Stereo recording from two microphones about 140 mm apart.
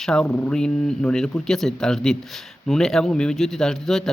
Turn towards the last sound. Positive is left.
turn(degrees=5)  # may be behind; listen again after turning